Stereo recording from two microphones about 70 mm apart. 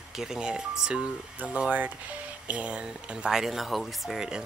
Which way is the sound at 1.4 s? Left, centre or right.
Right.